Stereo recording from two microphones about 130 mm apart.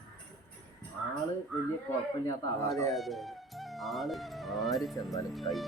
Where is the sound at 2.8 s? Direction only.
Centre (ahead or behind).